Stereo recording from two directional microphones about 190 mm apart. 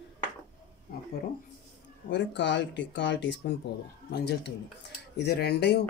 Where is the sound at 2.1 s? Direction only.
70° left (ahead or behind).